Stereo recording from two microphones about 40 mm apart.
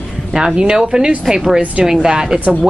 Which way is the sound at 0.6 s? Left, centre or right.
Right.